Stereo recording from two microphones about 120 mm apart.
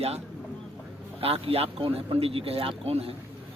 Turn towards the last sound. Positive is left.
turn(degrees=-55)  # may be behind; listen again after turning